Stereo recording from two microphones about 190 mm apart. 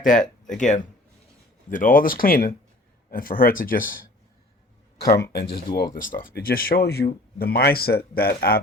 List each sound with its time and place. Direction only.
0.0 s speech: 45° left (ahead or behind)
5.3 s speech: 60° left (ahead or behind)
5.7 s speech: 45° left (ahead or behind)